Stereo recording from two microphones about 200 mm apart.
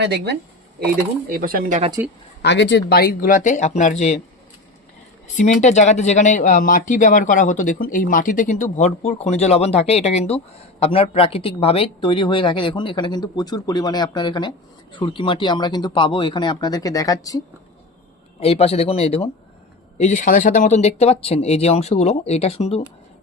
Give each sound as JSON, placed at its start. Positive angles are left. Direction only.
{"t": 0.0, "sound": "speech", "side_deg": -55}
{"t": 2.4, "sound": "speech", "side_deg": 60}
{"t": 2.9, "sound": "speech", "side_deg": 50}
{"t": 5.4, "sound": "speech", "side_deg": 35}
{"t": 18.3, "sound": "speech", "side_deg": 30}